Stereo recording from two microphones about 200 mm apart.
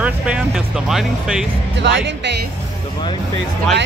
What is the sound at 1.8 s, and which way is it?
Speech, 60° right (ahead or behind).